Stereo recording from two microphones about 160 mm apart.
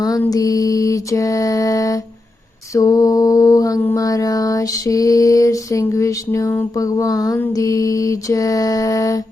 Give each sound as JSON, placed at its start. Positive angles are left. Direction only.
{"t": 0.0, "sound": "mantra", "side_deg": 25}